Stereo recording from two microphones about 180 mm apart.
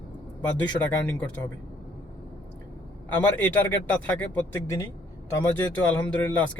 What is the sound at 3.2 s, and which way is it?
A man's voice, 10° left (ahead or behind).